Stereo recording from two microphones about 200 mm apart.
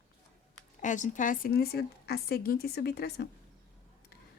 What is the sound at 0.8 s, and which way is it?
Speech, 40° left (ahead or behind).